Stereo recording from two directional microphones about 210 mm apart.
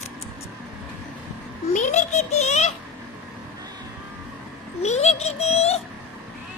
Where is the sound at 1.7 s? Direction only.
35° left (ahead or behind).